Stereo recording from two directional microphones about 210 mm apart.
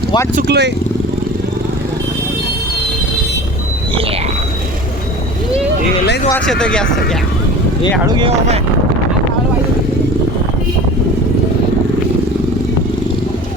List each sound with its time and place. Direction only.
0.3 s speech: 50° right (ahead or behind)
6.3 s speech: 5° left (ahead or behind)
8.1 s speech: 25° right (ahead or behind)